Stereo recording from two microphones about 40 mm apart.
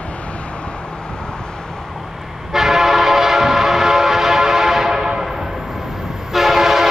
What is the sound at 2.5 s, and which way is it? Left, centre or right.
Train, centre.